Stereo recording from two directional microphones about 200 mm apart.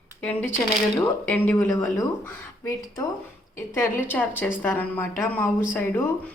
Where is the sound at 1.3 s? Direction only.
10° left (ahead or behind).